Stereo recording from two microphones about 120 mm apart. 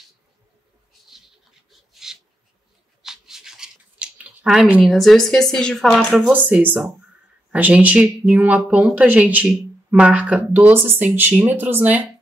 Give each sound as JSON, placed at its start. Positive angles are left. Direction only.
{"t": 1.7, "sound": "a sound", "side_deg": -5}
{"t": 3.0, "sound": "scissors", "side_deg": -5}
{"t": 4.8, "sound": "speech", "side_deg": 0}
{"t": 6.3, "sound": "speech", "side_deg": -15}